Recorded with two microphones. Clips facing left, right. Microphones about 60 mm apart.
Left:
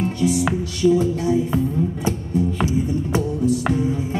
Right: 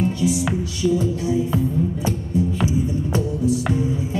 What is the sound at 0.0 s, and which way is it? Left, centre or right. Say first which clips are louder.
Music: left 1 dB; left.